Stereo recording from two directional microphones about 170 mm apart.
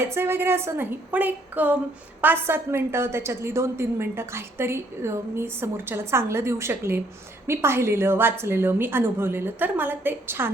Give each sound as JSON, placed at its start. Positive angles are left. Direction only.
{"t": 0.0, "sound": "a woman's voice", "side_deg": -15}